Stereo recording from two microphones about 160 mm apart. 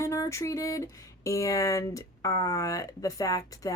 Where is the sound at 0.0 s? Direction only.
20° left (ahead or behind).